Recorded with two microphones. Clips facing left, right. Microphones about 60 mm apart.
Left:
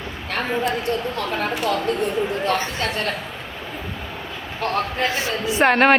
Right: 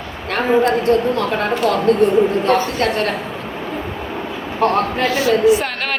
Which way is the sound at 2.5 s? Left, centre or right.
Right.